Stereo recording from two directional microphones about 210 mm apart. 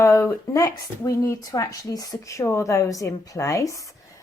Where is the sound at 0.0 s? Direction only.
15° left (ahead or behind).